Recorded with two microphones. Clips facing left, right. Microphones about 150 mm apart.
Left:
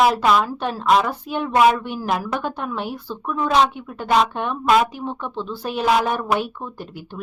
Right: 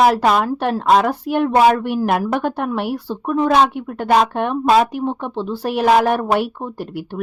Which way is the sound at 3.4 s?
55° right (ahead or behind).